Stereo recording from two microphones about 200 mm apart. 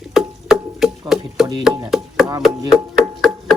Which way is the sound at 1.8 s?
Centre (ahead or behind).